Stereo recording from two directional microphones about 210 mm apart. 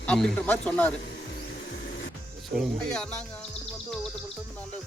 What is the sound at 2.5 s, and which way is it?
Speech, 5° left (ahead or behind).